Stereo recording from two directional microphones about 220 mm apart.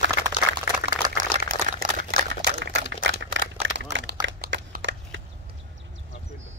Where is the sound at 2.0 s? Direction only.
50° right (ahead or behind).